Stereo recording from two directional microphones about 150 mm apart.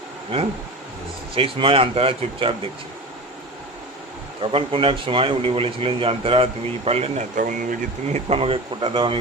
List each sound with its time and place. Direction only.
1.4 s speech: 35° right (ahead or behind)
4.5 s speech: 35° right (ahead or behind)
7.3 s speech: 65° right (ahead or behind)
8.3 s speech: 40° right (ahead or behind)